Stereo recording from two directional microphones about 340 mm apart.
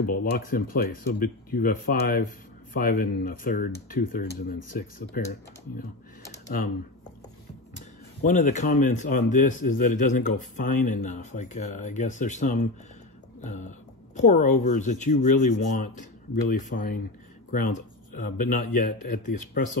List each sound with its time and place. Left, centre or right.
0.0 s speech: left
0.3 s speech: left
8.2 s speech: left